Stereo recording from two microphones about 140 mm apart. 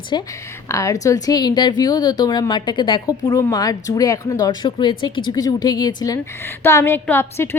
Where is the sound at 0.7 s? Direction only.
25° left (ahead or behind).